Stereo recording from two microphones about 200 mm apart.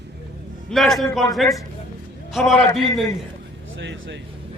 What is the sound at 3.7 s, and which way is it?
Speech, 65° right (ahead or behind).